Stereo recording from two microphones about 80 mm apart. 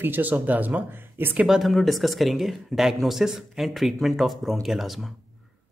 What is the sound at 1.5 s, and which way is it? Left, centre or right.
Speech, centre.